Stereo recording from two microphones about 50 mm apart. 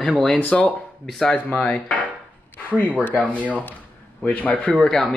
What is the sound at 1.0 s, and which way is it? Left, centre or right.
Speech, centre.